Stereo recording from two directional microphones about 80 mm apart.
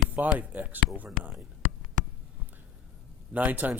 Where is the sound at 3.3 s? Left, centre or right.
Centre.